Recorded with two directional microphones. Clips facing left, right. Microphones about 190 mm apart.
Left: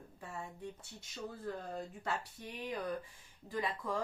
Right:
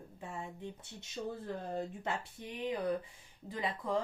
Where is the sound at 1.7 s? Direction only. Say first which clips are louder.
Right 3 dB; 25° right (ahead or behind).